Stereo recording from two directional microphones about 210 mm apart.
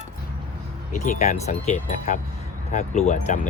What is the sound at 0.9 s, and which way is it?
Speech, 40° left (ahead or behind).